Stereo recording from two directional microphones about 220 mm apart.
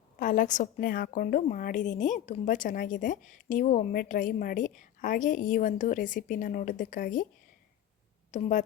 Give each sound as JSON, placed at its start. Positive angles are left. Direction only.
{"t": 0.2, "sound": "a woman's voice", "side_deg": 35}
{"t": 8.3, "sound": "speech", "side_deg": 35}